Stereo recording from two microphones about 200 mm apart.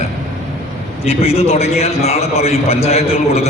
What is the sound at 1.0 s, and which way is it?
A man's voice, 30° left (ahead or behind).